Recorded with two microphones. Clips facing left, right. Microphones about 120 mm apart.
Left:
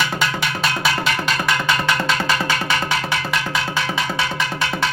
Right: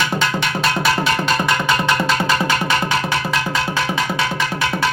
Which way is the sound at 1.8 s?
20° right (ahead or behind).